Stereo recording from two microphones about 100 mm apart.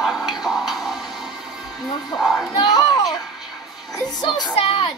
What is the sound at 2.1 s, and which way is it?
Speech, centre (ahead or behind).